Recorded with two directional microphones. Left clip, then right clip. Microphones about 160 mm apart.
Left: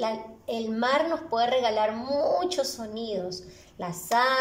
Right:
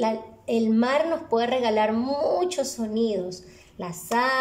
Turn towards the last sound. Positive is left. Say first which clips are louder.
# even
turn(degrees=-10)  # may be behind; listen again after turning